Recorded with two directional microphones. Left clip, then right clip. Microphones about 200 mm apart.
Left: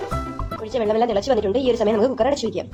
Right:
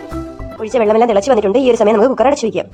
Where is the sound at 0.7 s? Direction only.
35° right (ahead or behind).